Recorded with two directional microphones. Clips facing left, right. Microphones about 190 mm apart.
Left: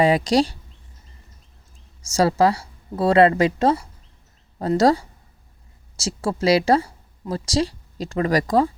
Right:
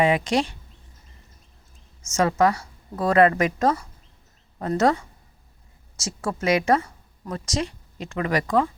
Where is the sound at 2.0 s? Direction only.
35° left (ahead or behind).